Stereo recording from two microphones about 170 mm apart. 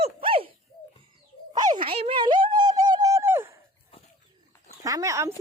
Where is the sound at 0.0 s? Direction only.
35° right (ahead or behind).